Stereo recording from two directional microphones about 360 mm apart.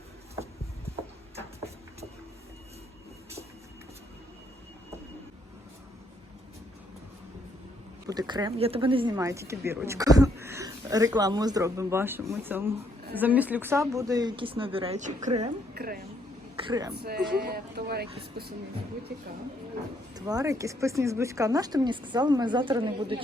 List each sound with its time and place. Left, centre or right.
8.0 s a woman's voice: centre
16.6 s speech: centre
16.9 s speech: right
20.1 s speech: centre